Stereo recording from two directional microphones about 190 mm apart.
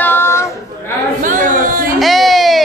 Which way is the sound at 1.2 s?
45° right (ahead or behind).